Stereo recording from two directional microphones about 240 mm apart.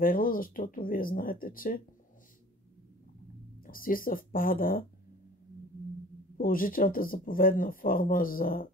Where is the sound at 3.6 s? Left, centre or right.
Left.